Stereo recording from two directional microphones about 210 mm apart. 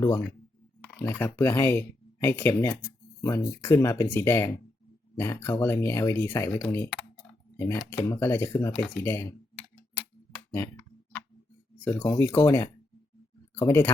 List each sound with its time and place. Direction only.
0.0 s speech: 15° left (ahead or behind)
10.5 s a sound: 10° left (ahead or behind)
11.9 s speech: 10° left (ahead or behind)